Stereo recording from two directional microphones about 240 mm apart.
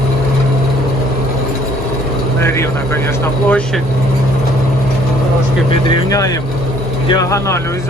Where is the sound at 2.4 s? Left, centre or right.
Centre.